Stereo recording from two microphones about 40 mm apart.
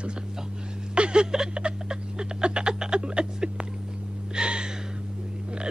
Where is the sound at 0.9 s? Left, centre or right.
Right.